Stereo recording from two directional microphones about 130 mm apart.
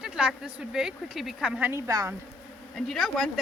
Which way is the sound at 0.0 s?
5° right (ahead or behind).